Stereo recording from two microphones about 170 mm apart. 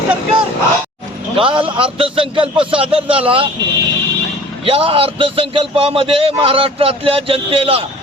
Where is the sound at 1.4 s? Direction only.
30° right (ahead or behind).